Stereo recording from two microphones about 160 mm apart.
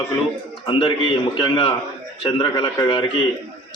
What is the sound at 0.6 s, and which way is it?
A man's voice, 30° left (ahead or behind).